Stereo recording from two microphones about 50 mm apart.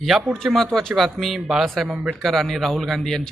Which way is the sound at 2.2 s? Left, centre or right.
Centre.